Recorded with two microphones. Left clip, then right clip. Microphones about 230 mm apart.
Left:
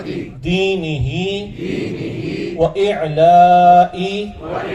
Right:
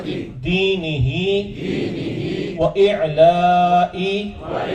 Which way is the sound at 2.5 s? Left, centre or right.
Left.